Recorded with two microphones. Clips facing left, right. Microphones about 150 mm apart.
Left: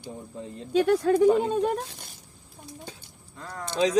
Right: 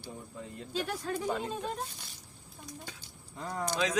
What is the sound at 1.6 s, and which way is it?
Speech, 85° left.